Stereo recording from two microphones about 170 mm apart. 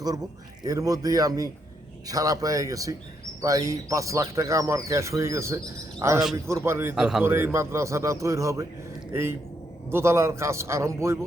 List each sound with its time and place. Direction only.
0.6 s a man's voice: 20° right (ahead or behind)
6.9 s a man's voice: centre (ahead or behind)
7.3 s speech: 15° right (ahead or behind)
9.9 s speech: 15° right (ahead or behind)